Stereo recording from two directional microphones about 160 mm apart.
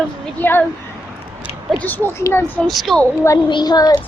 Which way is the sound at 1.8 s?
10° left (ahead or behind).